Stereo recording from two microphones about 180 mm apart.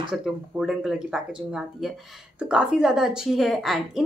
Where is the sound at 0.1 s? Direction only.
5° right (ahead or behind).